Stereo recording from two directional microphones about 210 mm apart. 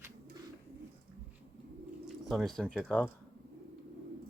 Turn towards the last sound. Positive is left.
turn(degrees=5)  # may be behind; listen again after turning